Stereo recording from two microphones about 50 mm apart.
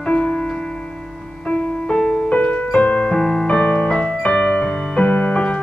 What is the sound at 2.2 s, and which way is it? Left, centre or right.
Music, left.